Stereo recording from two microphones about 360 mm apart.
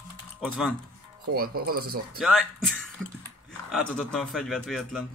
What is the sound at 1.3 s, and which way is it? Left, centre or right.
Speech, right.